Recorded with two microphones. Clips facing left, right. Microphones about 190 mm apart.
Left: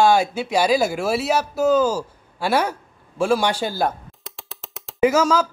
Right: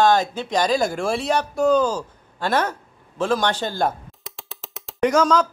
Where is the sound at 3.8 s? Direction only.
Centre (ahead or behind).